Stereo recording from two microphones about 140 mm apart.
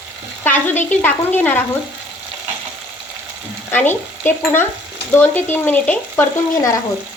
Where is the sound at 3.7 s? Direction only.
15° left (ahead or behind).